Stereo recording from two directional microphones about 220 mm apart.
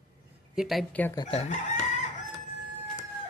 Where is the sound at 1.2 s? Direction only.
25° left (ahead or behind).